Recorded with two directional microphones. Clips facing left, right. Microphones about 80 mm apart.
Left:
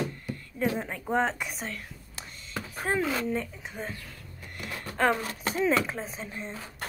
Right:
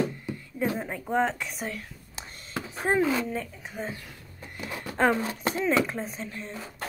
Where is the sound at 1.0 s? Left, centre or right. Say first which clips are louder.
Right 1 dB; centre.